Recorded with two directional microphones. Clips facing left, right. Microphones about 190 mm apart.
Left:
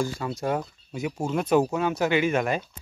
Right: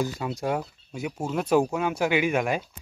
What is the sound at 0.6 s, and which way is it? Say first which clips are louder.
Speech: left 1 dB; 5° right (ahead or behind).